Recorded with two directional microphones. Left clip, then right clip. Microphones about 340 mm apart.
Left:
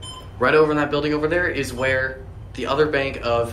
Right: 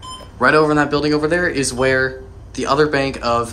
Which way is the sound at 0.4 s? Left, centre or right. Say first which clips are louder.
Right 3 dB; centre.